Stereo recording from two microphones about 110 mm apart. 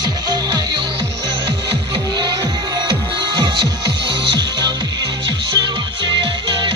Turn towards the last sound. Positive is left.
turn(degrees=-45)  # may be behind; listen again after turning